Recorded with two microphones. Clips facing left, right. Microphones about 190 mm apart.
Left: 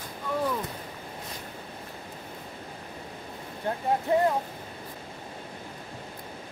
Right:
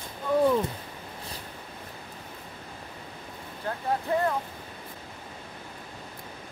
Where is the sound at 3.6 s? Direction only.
20° left (ahead or behind).